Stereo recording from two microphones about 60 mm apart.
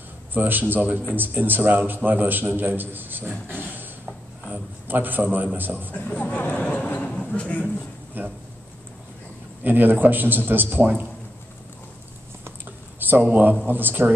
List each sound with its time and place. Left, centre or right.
0.3 s a man's voice: right
6.0 s speech: left
8.2 s a man's voice: right
9.6 s a man's voice: right
13.0 s a man's voice: right